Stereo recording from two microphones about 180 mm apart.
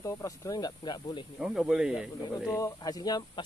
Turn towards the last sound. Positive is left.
turn(degrees=20)  # may be behind; listen again after turning